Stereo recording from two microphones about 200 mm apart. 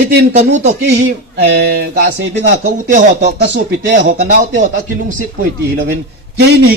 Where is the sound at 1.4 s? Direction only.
55° right (ahead or behind).